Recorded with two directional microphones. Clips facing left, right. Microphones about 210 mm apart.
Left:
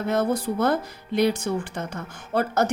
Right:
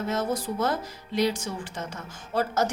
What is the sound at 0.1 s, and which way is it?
Speech, 60° left (ahead or behind).